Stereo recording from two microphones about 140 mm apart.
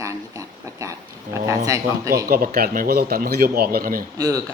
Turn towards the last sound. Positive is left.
turn(degrees=-25)  # may be behind; listen again after turning